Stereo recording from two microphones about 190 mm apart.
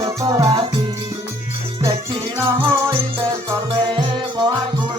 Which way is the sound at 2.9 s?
30° right (ahead or behind).